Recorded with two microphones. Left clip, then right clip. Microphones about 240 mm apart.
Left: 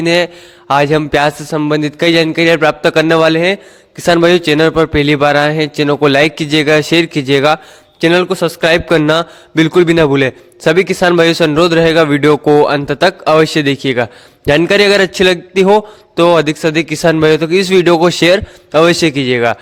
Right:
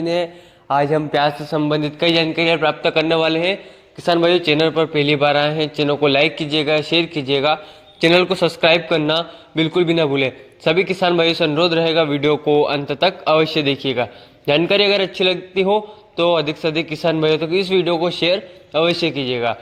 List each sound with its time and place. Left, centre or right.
0.0 s a man's voice: left